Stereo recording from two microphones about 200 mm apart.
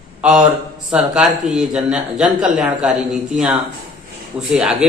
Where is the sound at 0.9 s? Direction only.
Centre (ahead or behind).